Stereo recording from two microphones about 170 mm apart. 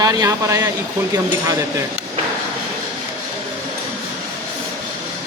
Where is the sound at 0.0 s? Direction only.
20° right (ahead or behind).